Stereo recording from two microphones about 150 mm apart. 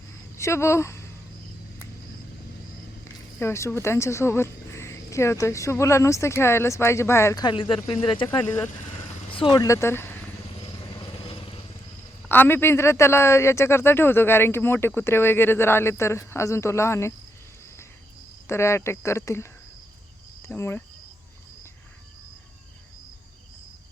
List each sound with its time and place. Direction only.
0.3 s speech: 20° left (ahead or behind)
3.0 s speech: 20° left (ahead or behind)
7.4 s speech: 35° left (ahead or behind)
8.3 s speech: 10° left (ahead or behind)
9.3 s speech: 30° left (ahead or behind); by 10.2 s 15° left (ahead or behind)
11.0 s vehicle: 35° left (ahead or behind)
12.3 s speech: 15° left (ahead or behind)
18.4 s speech: 20° left (ahead or behind)
20.5 s speech: 15° left (ahead or behind)